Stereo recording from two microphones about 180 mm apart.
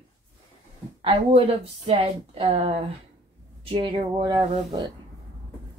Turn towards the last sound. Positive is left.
turn(degrees=-25)  # may be behind; listen again after turning